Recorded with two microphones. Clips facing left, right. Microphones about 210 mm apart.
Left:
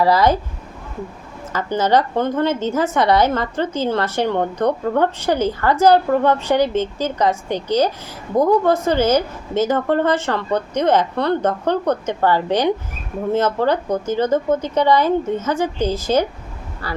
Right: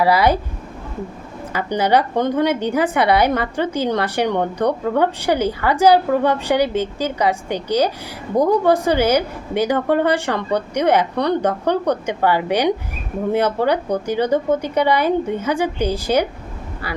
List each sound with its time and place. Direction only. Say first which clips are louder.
0.0 s a woman's voice: even; 10° right (ahead or behind)
1.5 s a woman's voice: even; 15° right (ahead or behind)